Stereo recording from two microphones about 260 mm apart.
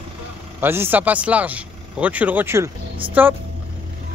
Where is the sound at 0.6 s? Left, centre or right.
Centre.